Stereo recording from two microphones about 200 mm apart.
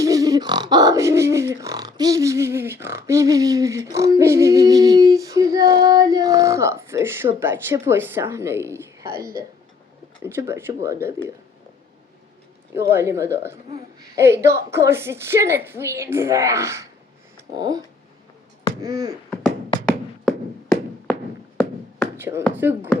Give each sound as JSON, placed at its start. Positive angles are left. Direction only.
{"t": 0.0, "sound": "speech", "side_deg": -15}
{"t": 10.2, "sound": "speech", "side_deg": -15}
{"t": 12.7, "sound": "speech", "side_deg": -10}
{"t": 19.9, "sound": "a sound", "side_deg": 0}
{"t": 22.2, "sound": "speech", "side_deg": -15}